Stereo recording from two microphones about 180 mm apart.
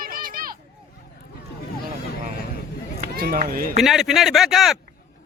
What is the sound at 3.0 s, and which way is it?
Speech, 55° right (ahead or behind).